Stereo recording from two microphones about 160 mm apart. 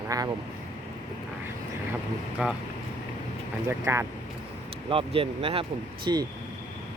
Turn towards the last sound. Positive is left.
turn(degrees=-25)  # may be behind; listen again after turning